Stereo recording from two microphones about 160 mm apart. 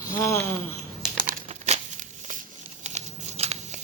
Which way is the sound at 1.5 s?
45° right (ahead or behind).